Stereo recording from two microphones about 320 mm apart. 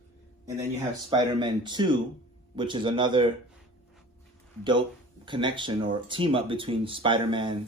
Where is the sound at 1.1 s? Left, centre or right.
Centre.